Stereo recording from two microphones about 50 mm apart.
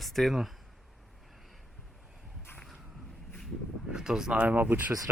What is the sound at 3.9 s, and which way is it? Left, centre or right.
Speech, centre.